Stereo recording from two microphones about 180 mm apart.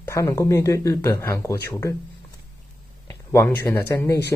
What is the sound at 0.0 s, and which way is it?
Speech, 15° left (ahead or behind).